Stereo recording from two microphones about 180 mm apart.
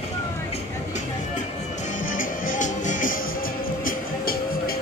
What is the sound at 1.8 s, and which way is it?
Music, 45° left (ahead or behind).